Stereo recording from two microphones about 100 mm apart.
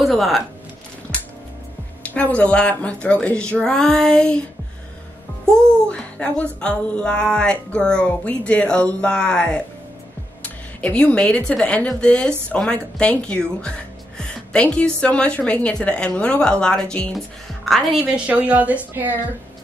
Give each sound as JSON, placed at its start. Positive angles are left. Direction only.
{"t": 0.0, "sound": "a sound", "side_deg": 0}
{"t": 2.0, "sound": "speech", "side_deg": 15}
{"t": 5.4, "sound": "a woman's voice", "side_deg": 5}
{"t": 18.0, "sound": "a woman's voice", "side_deg": -15}